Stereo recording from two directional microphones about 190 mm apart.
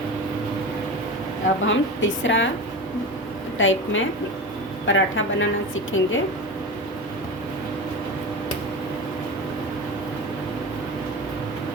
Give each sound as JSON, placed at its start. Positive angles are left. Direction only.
{"t": 1.6, "sound": "a woman's voice", "side_deg": 80}
{"t": 3.6, "sound": "a woman's voice", "side_deg": 90}